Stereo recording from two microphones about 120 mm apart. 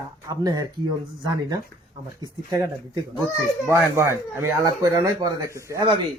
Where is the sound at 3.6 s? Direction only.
20° right (ahead or behind).